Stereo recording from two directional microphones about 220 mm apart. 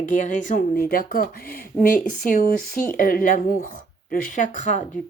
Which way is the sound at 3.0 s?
40° left (ahead or behind).